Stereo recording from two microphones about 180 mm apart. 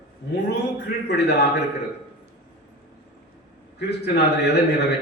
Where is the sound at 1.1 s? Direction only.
70° left (ahead or behind).